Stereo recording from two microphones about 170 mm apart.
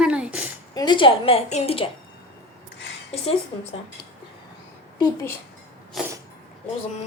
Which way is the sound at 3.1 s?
35° left (ahead or behind).